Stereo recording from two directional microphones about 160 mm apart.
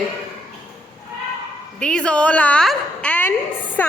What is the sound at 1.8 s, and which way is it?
A woman's voice, 5° left (ahead or behind).